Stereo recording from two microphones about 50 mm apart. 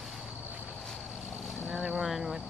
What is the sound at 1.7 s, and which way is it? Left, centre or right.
Vehicle, centre.